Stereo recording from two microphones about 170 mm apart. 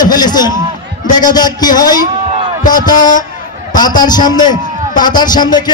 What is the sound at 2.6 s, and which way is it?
Speech, 50° left (ahead or behind).